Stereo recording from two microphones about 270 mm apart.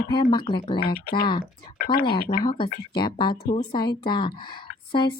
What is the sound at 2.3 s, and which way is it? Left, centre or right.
A woman's voice, centre.